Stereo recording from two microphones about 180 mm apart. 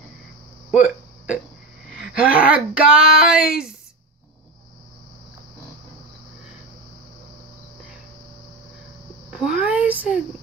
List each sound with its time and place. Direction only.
0.7 s hiccup: 5° right (ahead or behind)
2.3 s speech: 5° right (ahead or behind)
9.3 s a sound: 5° right (ahead or behind)